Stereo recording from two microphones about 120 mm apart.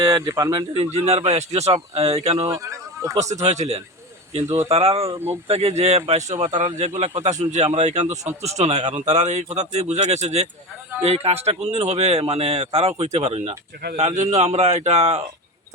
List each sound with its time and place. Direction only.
0.0 s speech: 25° right (ahead or behind)
0.7 s speech: 55° right (ahead or behind)
2.5 s speech: 25° right (ahead or behind)
3.4 s speech: 65° right (ahead or behind)
6.1 s speech: 75° right (ahead or behind)
8.4 s speech: 65° right (ahead or behind)